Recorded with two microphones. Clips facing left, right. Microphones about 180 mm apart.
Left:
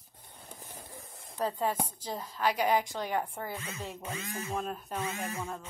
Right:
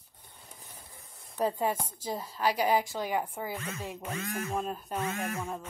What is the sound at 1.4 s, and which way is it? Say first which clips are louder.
A woman's voice: right 2 dB; 15° right (ahead or behind).